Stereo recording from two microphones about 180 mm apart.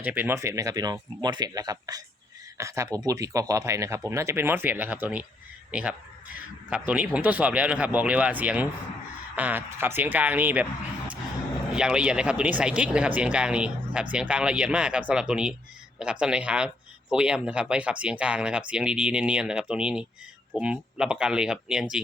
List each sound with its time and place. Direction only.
0.0 s speech: 10° right (ahead or behind)
11.7 s speech: 5° right (ahead or behind)